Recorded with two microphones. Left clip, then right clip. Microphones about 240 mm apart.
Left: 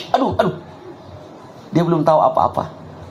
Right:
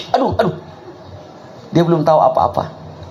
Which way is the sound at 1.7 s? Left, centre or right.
Right.